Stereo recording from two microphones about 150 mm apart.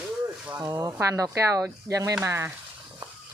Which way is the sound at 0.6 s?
20° right (ahead or behind).